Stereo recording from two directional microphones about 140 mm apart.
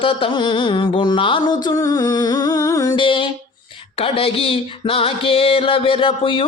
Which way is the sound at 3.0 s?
35° left (ahead or behind).